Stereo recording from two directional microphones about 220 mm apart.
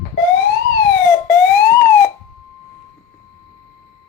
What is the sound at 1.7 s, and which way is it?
Siren, 10° left (ahead or behind).